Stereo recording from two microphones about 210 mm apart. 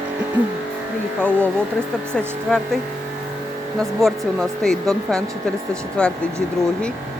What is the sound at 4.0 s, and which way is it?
Speech, centre (ahead or behind).